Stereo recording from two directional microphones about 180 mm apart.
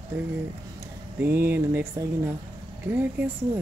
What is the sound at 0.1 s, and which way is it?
Speech, 10° right (ahead or behind).